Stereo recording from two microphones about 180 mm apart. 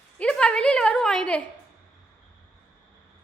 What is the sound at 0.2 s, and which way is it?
A woman's voice, 5° left (ahead or behind).